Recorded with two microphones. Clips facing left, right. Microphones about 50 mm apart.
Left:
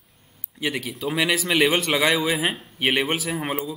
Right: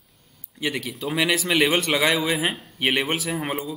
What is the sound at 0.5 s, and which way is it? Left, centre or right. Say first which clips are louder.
A man's voice: even; centre.